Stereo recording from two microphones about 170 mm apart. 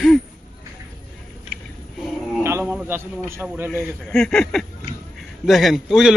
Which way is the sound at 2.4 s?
15° right (ahead or behind).